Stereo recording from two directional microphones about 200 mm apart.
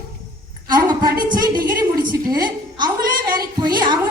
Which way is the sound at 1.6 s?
45° right (ahead or behind).